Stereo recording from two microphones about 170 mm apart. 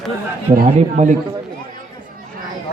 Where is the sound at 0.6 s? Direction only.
45° right (ahead or behind).